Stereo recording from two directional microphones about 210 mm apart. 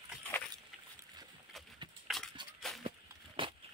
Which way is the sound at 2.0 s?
Centre (ahead or behind).